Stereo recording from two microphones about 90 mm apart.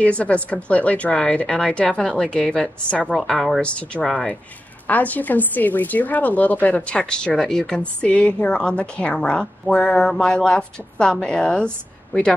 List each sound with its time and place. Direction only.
0.0 s a woman's voice: 15° left (ahead or behind)
4.8 s a woman's voice: 20° left (ahead or behind)